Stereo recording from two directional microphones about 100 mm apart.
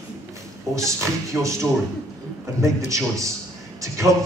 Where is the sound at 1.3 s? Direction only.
20° right (ahead or behind).